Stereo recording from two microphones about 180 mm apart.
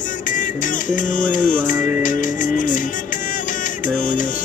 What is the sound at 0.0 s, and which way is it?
Music, 45° left (ahead or behind).